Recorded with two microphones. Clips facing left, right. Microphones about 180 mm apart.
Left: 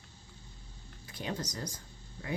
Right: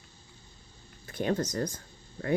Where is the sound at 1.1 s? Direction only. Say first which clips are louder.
Right 9 dB; 55° right (ahead or behind).